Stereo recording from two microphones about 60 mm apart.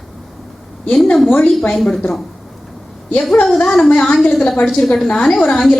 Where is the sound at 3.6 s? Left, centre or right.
Centre.